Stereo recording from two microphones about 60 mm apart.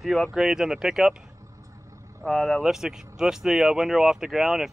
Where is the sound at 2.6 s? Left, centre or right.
Centre.